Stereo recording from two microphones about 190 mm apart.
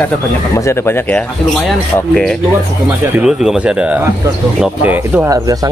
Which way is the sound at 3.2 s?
5° right (ahead or behind).